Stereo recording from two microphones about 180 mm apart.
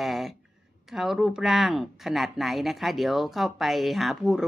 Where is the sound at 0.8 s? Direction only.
Centre (ahead or behind).